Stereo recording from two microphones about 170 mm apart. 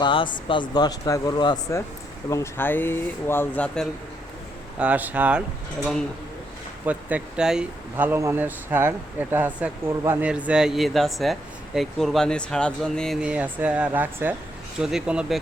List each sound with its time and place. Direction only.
0.0 s speech: 30° left (ahead or behind)
2.3 s speech: 15° left (ahead or behind)
4.8 s speech: 10° right (ahead or behind)
5.8 s speech: 5° left (ahead or behind)
6.8 s speech: 5° right (ahead or behind)